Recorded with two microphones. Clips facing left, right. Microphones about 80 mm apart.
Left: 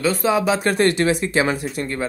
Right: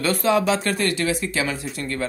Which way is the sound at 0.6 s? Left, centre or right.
Left.